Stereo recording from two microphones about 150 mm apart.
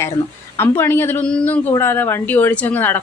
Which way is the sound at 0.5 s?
15° left (ahead or behind).